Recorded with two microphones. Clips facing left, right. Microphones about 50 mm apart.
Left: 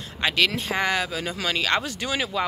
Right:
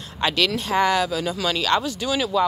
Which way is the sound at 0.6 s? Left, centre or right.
Centre.